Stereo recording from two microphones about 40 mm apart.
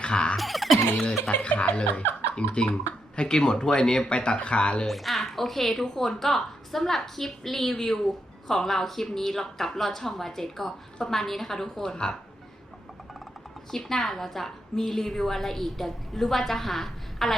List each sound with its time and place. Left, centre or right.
0.0 s a sound: left
0.3 s music: centre
1.3 s speech: left
3.2 s speech: centre
4.9 s a woman's voice: centre
13.7 s a woman's voice: centre